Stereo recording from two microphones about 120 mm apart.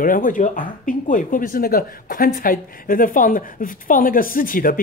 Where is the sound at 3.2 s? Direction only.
90° left.